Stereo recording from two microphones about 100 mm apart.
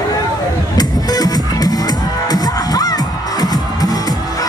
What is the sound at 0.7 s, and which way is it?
Music, 40° left (ahead or behind).